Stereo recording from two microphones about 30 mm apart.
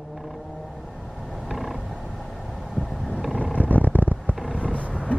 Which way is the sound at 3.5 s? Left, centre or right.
Left.